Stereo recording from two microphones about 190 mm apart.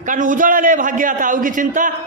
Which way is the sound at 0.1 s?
45° right (ahead or behind).